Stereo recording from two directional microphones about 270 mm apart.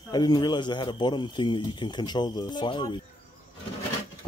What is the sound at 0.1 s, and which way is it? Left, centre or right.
Speech, centre.